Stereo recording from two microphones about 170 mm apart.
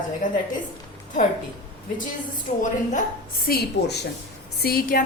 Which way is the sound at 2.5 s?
45° left (ahead or behind).